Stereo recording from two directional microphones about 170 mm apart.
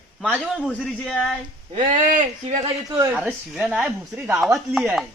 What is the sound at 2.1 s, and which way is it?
Speech, 45° right (ahead or behind).